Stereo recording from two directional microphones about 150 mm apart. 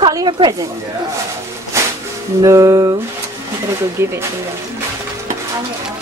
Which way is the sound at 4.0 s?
15° right (ahead or behind).